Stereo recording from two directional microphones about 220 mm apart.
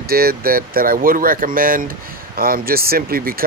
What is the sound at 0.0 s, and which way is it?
Speech, 45° right (ahead or behind).